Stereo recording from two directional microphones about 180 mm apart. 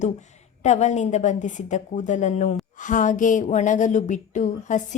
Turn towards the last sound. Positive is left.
turn(degrees=45)  # may be behind; listen again after turning